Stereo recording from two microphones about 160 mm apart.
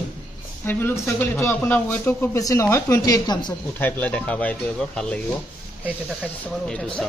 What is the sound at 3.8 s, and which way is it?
A man's voice, 10° left (ahead or behind).